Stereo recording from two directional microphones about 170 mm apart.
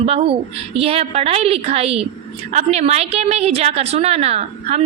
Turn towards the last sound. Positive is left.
turn(degrees=-40)  # may be behind; listen again after turning